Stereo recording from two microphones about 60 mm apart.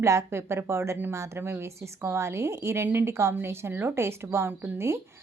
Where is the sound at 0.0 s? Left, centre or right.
Right.